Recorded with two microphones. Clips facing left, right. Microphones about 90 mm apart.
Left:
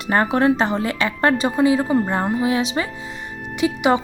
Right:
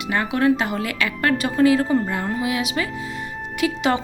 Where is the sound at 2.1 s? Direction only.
30° left (ahead or behind).